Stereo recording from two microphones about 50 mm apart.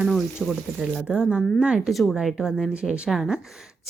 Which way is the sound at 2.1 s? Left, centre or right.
Centre.